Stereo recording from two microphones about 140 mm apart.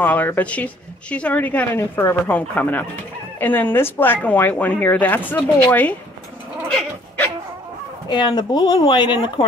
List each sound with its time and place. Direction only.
0.0 s speech: 15° left (ahead or behind)
8.1 s speech: 30° left (ahead or behind)